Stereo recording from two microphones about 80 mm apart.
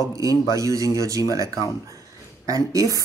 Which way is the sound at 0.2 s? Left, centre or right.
Right.